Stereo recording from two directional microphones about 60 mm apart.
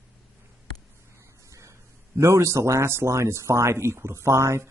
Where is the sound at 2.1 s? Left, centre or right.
Right.